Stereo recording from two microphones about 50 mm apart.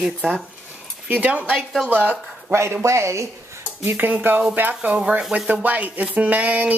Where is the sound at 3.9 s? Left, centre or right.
Right.